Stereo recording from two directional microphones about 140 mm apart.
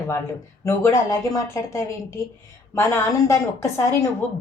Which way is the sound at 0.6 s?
25° left (ahead or behind).